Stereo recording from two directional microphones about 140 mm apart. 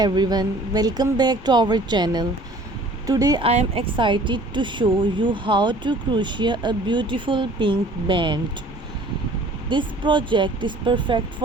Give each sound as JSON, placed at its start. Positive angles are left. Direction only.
{"t": 0.0, "sound": "speech", "side_deg": -30}
{"t": 3.4, "sound": "speech", "side_deg": -45}
{"t": 3.9, "sound": "speech", "side_deg": -35}
{"t": 9.6, "sound": "speech", "side_deg": -35}